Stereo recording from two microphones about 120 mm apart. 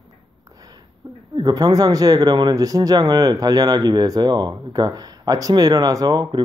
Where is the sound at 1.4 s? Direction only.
35° right (ahead or behind).